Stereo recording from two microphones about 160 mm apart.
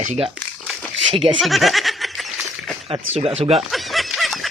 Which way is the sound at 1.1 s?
30° right (ahead or behind).